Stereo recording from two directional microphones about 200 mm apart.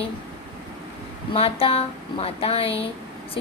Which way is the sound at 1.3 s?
30° left (ahead or behind).